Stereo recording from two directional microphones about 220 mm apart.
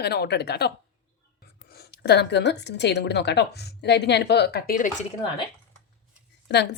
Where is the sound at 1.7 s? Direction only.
45° left (ahead or behind).